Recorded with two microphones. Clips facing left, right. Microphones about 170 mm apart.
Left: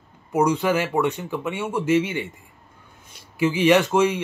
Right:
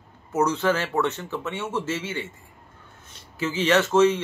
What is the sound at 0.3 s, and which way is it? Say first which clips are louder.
Speech: left 2 dB; 15° left (ahead or behind).